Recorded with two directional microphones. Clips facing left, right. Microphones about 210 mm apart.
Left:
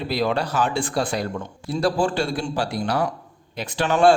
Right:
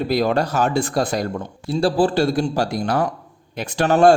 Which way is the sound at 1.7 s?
30° right (ahead or behind).